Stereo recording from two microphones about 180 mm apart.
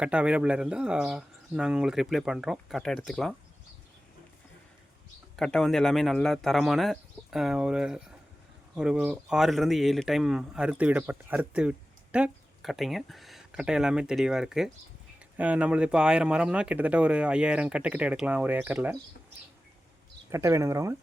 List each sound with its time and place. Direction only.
0.0 s speech: 5° right (ahead or behind)
5.4 s speech: centre (ahead or behind)
20.3 s speech: 15° right (ahead or behind)